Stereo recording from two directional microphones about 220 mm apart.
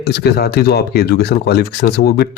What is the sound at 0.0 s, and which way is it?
Speech, 45° left (ahead or behind).